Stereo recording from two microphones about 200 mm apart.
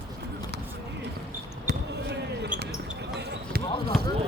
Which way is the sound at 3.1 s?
55° right (ahead or behind).